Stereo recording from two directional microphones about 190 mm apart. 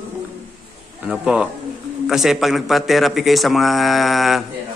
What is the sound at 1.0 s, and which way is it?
A man's voice, 5° right (ahead or behind).